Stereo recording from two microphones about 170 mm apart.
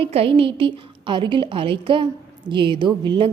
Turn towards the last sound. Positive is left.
turn(degrees=-30)  # may be behind; listen again after turning